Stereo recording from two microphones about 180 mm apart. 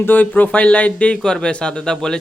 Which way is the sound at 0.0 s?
10° left (ahead or behind).